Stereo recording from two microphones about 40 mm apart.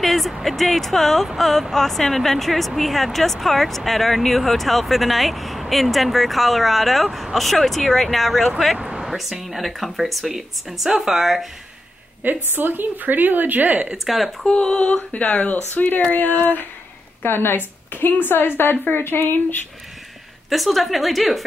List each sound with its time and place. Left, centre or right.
0.0 s speech: centre
8.7 s a sound: right
9.0 s speech: centre
12.2 s a woman's voice: right
14.0 s speech: centre
14.4 s a sound: left
15.1 s speech: left
15.5 s speech: left
17.2 s a woman's voice: left
20.4 s speech: centre